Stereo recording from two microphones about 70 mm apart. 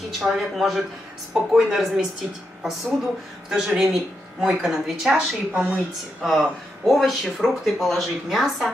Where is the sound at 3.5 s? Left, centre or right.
Centre.